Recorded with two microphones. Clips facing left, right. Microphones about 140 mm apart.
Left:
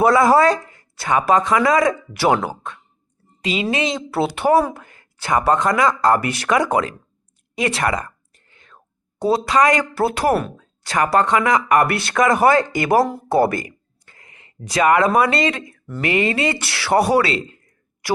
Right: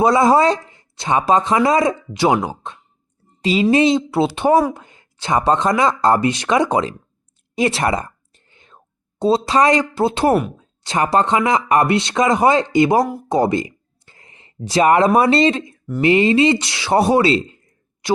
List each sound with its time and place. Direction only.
0.0 s speech: 20° right (ahead or behind)
3.4 s a woman's voice: 35° right (ahead or behind)
4.1 s speech: 20° right (ahead or behind)